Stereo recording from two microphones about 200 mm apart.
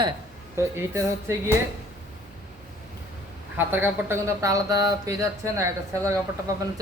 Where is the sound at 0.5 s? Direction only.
15° right (ahead or behind).